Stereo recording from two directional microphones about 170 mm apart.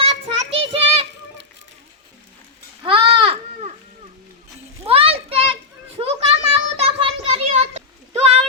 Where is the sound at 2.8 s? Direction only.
30° right (ahead or behind).